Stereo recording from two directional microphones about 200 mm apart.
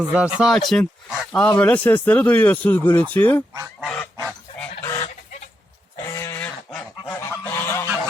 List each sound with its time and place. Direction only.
0.1 s speech: 5° right (ahead or behind)
3.8 s goose: 5° left (ahead or behind)
4.8 s goose: 15° left (ahead or behind)
6.1 s goose: 15° left (ahead or behind)